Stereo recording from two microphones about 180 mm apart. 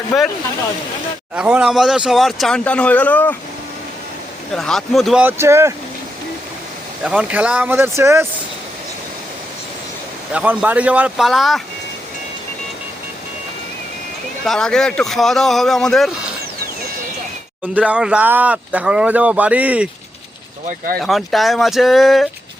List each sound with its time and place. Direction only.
0.1 s speech: centre (ahead or behind)
1.4 s speech: 5° right (ahead or behind)
4.5 s speech: centre (ahead or behind)
5.2 s speech: 15° right (ahead or behind)
7.0 s speech: 5° right (ahead or behind)
10.3 s speech: 5° right (ahead or behind)
14.4 s speech: centre (ahead or behind)
17.7 s speech: 5° right (ahead or behind)
20.7 s speech: 50° right (ahead or behind)
21.0 s speech: centre (ahead or behind)